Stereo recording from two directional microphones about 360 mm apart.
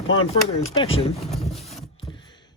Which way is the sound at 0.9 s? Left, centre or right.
Centre.